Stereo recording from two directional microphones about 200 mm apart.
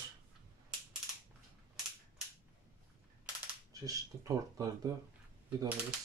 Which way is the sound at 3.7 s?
15° right (ahead or behind).